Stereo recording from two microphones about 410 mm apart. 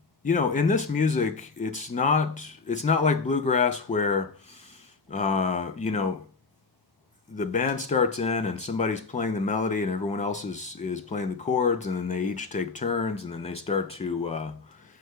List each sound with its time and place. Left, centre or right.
0.3 s speech: centre
7.3 s speech: centre